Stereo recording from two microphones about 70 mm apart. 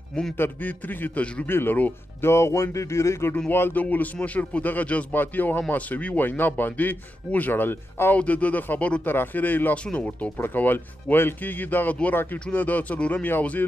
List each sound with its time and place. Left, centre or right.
0.4 s a man's voice: left
1.5 s a man's voice: left
2.2 s speech: left
3.8 s a man's voice: left
8.2 s a man's voice: left